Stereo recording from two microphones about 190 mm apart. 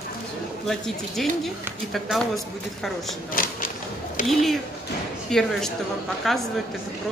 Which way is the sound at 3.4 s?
50° left (ahead or behind).